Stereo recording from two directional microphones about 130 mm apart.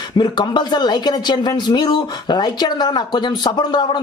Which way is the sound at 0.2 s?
35° left (ahead or behind).